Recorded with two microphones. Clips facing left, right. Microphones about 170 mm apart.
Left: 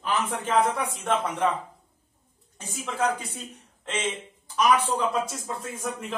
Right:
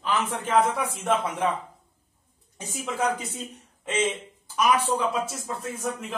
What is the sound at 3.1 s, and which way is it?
Speech, 20° right (ahead or behind).